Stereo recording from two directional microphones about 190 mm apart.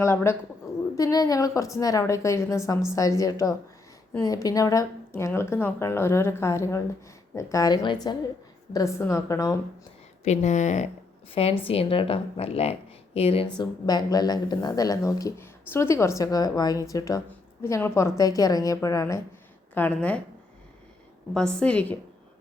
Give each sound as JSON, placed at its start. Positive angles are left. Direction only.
{"t": 0.0, "sound": "speech", "side_deg": 15}
{"t": 10.2, "sound": "speech", "side_deg": 35}
{"t": 21.3, "sound": "a woman's voice", "side_deg": 5}